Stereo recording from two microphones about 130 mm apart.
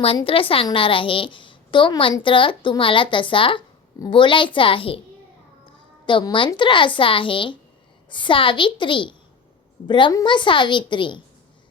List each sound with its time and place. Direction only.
0.3 s a woman's voice: 45° left (ahead or behind)
6.1 s a woman's voice: 40° left (ahead or behind)